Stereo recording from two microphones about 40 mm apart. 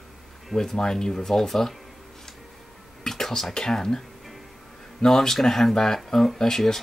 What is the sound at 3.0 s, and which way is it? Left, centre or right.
Whispering, centre.